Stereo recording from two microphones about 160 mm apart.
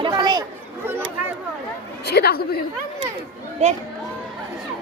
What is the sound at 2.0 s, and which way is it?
Speech, 85° left.